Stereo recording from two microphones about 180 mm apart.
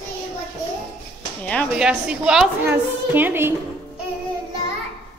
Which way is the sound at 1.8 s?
5° right (ahead or behind).